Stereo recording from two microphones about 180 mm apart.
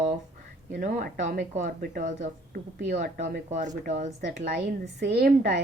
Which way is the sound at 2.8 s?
70° right (ahead or behind).